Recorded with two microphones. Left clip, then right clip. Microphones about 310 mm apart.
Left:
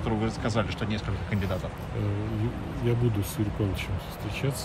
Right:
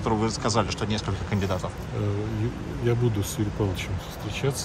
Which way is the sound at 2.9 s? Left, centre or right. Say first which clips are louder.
Right 3 dB; centre.